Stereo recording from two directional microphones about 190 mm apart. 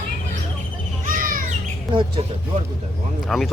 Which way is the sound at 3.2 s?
Centre (ahead or behind).